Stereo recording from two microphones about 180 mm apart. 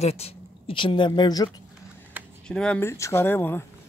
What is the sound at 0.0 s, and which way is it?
Speech, 35° left (ahead or behind).